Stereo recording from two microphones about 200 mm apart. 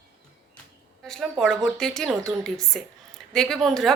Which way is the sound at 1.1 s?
Centre (ahead or behind).